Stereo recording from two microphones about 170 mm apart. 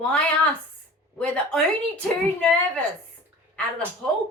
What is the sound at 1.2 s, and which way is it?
A woman's voice, 5° left (ahead or behind).